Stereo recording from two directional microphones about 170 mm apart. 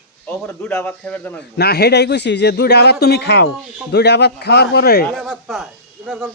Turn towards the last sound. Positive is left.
turn(degrees=-10)  # may be behind; listen again after turning